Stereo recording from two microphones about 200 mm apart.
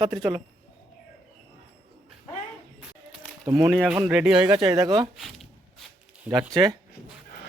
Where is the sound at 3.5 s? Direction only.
15° right (ahead or behind).